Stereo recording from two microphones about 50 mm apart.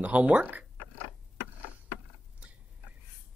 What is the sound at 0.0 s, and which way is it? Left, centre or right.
Speech, right.